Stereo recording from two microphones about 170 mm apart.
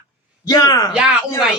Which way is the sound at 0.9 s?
5° right (ahead or behind).